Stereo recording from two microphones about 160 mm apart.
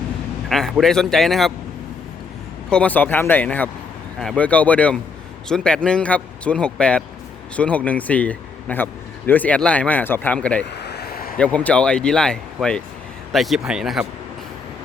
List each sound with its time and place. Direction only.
0.4 s speech: 5° left (ahead or behind)
2.6 s a man's voice: 10° left (ahead or behind)
10.8 s a sound: 90° left
11.3 s speech: 10° left (ahead or behind)